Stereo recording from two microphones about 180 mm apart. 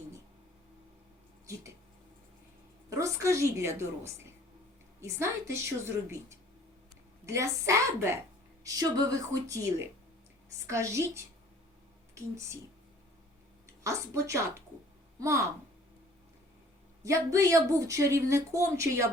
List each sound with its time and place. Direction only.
2.9 s speech: 15° right (ahead or behind)
13.8 s speech: 15° right (ahead or behind)
17.0 s speech: 15° right (ahead or behind)